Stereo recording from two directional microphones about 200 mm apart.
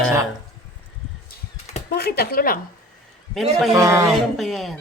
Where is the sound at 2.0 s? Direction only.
50° left (ahead or behind).